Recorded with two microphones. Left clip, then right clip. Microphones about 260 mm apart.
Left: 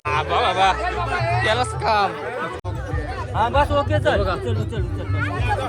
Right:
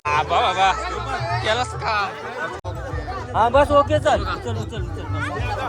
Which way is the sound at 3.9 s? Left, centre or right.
Right.